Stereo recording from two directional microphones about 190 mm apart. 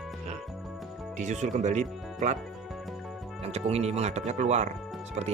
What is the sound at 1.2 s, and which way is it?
Speech, 40° right (ahead or behind).